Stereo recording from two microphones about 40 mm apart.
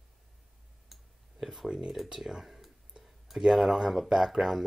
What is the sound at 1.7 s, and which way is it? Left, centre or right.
Speech, right.